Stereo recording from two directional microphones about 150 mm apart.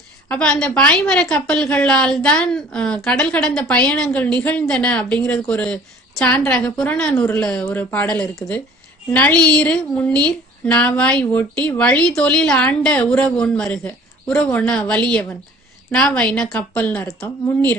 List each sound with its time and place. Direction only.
0.3 s a woman's voice: 5° left (ahead or behind)